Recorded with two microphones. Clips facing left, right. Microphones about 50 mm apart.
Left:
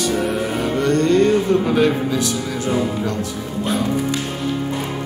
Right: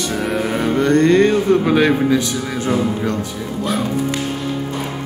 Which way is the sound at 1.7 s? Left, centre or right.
Right.